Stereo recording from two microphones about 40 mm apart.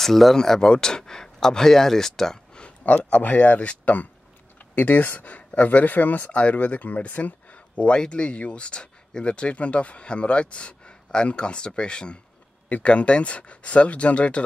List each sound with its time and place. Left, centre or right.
0.0 s speech: centre
0.6 s speech: left
2.8 s speech: left